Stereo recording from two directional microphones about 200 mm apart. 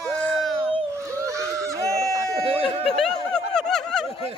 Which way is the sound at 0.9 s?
15° right (ahead or behind).